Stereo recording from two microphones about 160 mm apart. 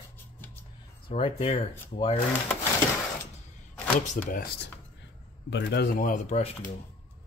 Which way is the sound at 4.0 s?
55° left (ahead or behind).